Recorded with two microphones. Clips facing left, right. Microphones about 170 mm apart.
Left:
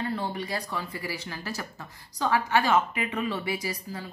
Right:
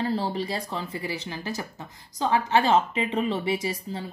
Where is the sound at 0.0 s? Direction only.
30° right (ahead or behind).